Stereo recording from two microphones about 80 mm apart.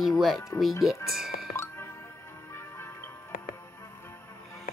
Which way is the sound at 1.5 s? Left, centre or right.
Left.